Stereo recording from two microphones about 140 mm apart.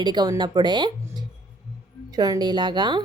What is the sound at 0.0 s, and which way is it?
Speech, 30° right (ahead or behind).